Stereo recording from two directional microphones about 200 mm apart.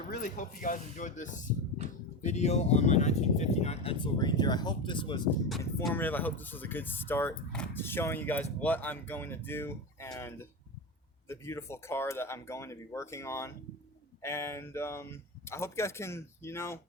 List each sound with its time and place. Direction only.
0.1 s speech: 40° left (ahead or behind); by 5.3 s 25° left (ahead or behind)
5.5 s speech: centre (ahead or behind)